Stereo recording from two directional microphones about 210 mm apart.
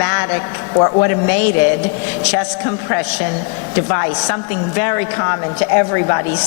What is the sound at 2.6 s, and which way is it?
A woman's voice, 15° left (ahead or behind).